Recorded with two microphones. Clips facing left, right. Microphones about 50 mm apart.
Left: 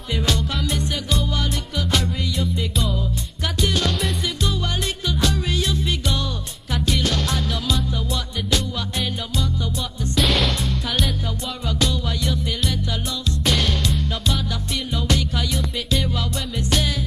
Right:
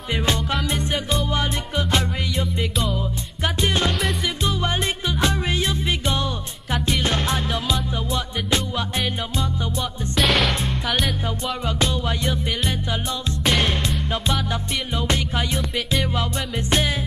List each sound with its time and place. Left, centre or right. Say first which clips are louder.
0.1 s music: right 1 dB; right
3.6 s music: even; right
10.1 s music: right 1 dB; centre
11.6 s music: left 1 dB; right